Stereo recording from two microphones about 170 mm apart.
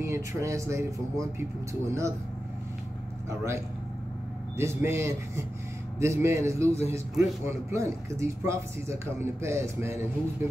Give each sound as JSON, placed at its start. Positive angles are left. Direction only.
{"t": 0.0, "sound": "speech", "side_deg": -15}
{"t": 3.3, "sound": "speech", "side_deg": -15}